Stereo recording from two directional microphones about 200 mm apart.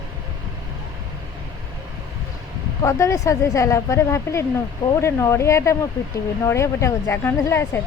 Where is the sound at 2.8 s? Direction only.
15° left (ahead or behind).